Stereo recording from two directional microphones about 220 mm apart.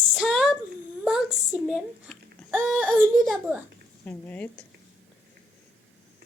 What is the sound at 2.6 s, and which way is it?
Speech, centre (ahead or behind).